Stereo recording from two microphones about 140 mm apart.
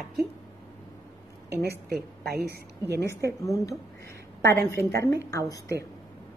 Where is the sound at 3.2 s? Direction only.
25° left (ahead or behind).